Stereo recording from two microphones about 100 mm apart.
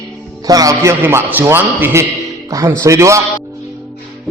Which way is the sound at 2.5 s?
35° right (ahead or behind).